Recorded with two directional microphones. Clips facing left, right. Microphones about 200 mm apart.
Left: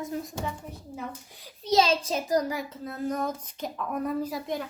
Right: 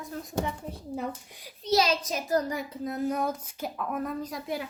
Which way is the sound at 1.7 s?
25° left (ahead or behind).